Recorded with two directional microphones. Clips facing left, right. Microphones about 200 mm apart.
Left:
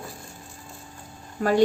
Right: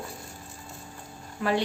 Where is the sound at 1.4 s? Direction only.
45° left (ahead or behind).